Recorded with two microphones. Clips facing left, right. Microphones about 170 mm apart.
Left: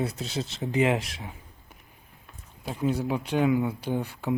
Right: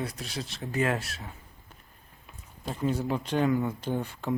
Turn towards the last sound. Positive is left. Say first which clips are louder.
# left 2 dB
turn(degrees=10)  # may be behind; listen again after turning